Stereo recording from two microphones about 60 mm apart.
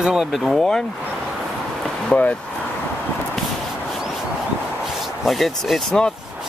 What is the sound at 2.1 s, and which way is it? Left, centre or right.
Speech, left.